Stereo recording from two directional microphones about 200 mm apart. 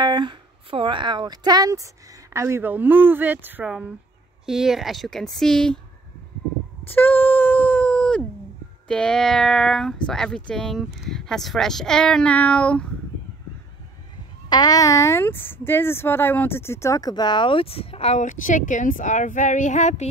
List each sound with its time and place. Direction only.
0.0 s speech: 25° right (ahead or behind); by 5.8 s 5° left (ahead or behind)
6.9 s speech: 10° left (ahead or behind)
14.5 s speech: 20° left (ahead or behind); by 20.1 s 35° left (ahead or behind)